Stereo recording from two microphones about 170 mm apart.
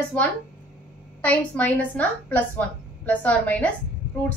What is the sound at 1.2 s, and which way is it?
A woman's voice, 10° left (ahead or behind).